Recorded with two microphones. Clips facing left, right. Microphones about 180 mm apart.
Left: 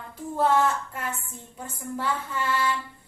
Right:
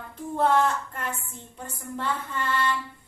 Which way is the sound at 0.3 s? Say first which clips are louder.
Even; 5° left (ahead or behind).